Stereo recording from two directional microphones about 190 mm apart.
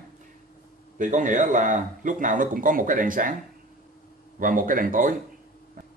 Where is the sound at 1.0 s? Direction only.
40° right (ahead or behind).